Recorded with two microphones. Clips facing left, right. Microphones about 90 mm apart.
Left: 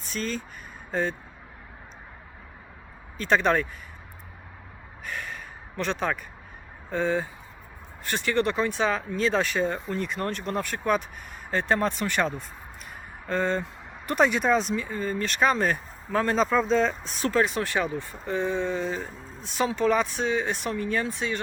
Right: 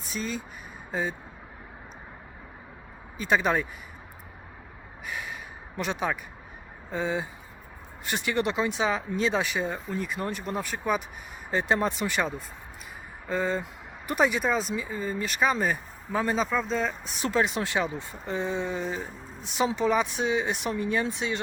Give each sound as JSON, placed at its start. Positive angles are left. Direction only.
{"t": 0.1, "sound": "speech", "side_deg": -10}
{"t": 3.2, "sound": "speech", "side_deg": -10}
{"t": 5.0, "sound": "a sound", "side_deg": -10}
{"t": 6.9, "sound": "speech", "side_deg": -15}